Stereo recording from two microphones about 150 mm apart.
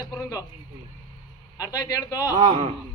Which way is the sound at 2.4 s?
50° right (ahead or behind).